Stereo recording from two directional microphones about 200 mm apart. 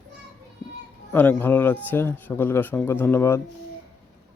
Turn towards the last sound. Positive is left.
turn(degrees=10)  # may be behind; listen again after turning